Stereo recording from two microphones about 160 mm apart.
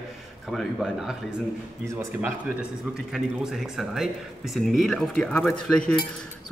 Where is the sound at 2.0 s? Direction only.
15° right (ahead or behind).